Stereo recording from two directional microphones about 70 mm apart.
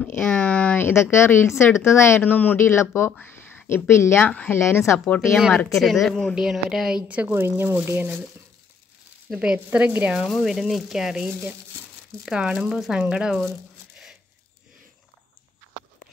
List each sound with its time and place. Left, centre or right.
0.3 s speech: centre
0.9 s a woman's voice: left
2.6 s a woman's voice: left
5.0 s speech: centre
5.7 s speech: centre
7.1 s a woman's voice: right
7.3 s speech: right
9.7 s a woman's voice: right
10.2 s speech: centre